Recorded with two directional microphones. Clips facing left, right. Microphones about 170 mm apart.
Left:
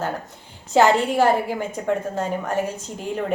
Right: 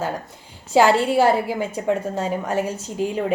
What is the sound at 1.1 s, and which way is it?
A woman's voice, 10° right (ahead or behind).